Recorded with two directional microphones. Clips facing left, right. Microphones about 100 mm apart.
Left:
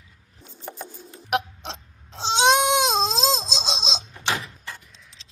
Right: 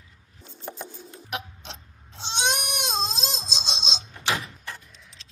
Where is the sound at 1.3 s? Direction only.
75° left (ahead or behind).